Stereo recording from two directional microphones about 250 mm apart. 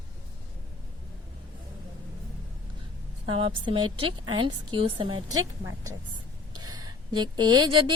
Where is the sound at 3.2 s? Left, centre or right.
Right.